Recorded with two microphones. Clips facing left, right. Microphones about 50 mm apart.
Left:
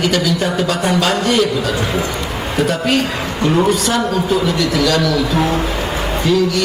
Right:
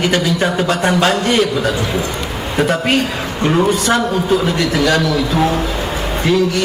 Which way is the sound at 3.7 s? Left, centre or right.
Right.